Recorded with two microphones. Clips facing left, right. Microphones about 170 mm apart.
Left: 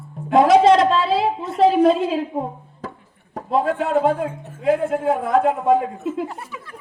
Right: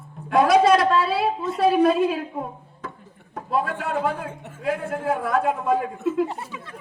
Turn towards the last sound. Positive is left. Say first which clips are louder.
# left 2 dB
turn(degrees=25)  # may be behind; listen again after turning